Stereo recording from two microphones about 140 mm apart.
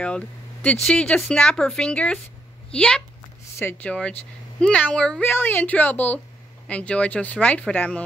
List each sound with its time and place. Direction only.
0.0 s speech: 5° left (ahead or behind)